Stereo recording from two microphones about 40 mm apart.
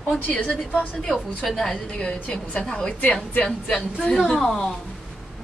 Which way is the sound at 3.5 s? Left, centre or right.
Centre.